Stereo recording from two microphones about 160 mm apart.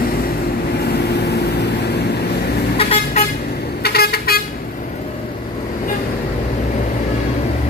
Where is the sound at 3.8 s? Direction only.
75° left (ahead or behind).